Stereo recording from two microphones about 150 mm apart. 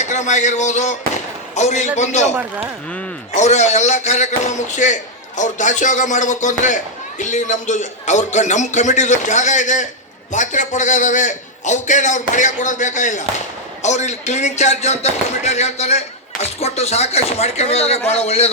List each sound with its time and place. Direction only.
0.0 s speech: 55° left (ahead or behind)
2.3 s speech: 5° right (ahead or behind)
3.3 s speech: 50° left (ahead or behind)